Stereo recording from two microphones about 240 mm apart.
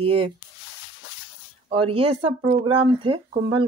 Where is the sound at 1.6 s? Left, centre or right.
Right.